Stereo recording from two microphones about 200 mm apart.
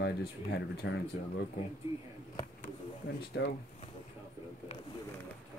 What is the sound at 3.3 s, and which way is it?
Speech, 65° left (ahead or behind).